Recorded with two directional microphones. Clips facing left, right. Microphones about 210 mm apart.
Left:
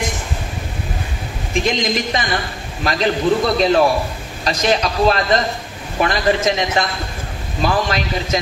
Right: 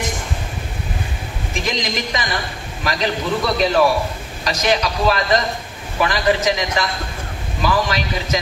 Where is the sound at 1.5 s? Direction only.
30° left (ahead or behind).